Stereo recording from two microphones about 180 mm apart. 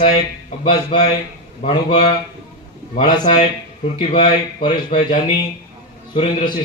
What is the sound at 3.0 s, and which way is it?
Speech, 25° left (ahead or behind).